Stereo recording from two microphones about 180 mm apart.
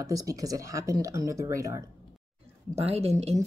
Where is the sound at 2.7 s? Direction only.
35° right (ahead or behind).